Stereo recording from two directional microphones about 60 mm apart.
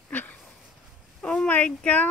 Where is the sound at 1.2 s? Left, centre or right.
Centre.